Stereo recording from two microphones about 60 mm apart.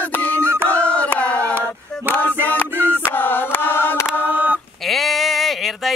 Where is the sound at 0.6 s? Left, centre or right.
Left.